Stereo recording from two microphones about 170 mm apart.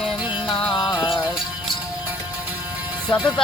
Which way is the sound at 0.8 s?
20° left (ahead or behind).